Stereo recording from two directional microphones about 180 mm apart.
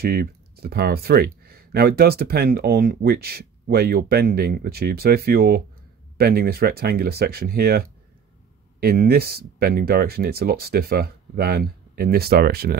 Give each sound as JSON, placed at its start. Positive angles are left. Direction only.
{"t": 0.0, "sound": "speech", "side_deg": -60}